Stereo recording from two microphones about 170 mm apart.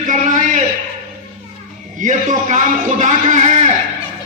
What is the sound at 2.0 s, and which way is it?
A man's voice, 50° right (ahead or behind).